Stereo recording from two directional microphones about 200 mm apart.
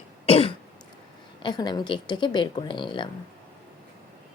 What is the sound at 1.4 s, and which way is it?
Speech, 20° left (ahead or behind).